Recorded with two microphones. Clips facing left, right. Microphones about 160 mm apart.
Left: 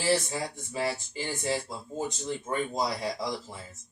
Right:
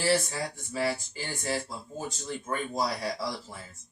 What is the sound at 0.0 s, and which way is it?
Speech, 20° left (ahead or behind).